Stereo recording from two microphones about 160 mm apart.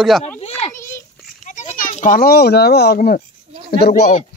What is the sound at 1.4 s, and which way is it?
A child's voice, 50° left (ahead or behind).